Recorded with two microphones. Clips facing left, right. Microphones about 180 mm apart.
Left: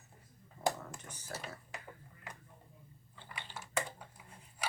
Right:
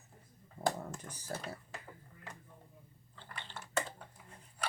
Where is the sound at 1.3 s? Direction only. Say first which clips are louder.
Right 3 dB; 35° right (ahead or behind).